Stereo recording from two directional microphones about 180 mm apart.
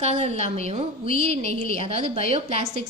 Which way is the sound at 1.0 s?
50° left (ahead or behind).